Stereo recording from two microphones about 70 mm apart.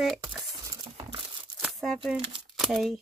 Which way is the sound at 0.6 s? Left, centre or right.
Right.